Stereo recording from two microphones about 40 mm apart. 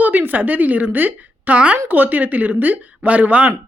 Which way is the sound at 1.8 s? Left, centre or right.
Right.